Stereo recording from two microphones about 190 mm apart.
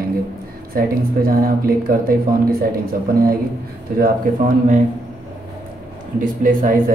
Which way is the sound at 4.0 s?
45° right (ahead or behind).